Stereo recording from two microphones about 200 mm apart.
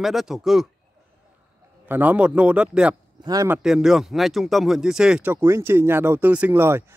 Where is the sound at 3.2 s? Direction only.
20° right (ahead or behind).